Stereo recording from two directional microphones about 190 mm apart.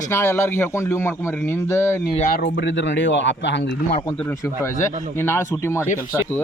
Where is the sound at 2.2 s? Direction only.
45° left (ahead or behind); by 3.6 s 70° left (ahead or behind).